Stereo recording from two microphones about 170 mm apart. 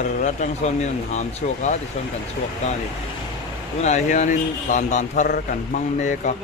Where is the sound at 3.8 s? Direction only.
45° left (ahead or behind).